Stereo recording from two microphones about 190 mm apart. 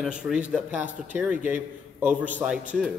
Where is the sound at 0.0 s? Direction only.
5° right (ahead or behind).